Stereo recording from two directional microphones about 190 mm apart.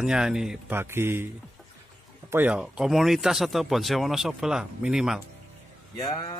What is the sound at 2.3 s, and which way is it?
Speech, 5° right (ahead or behind).